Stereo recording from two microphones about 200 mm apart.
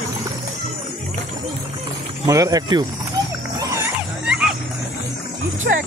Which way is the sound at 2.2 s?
15° right (ahead or behind).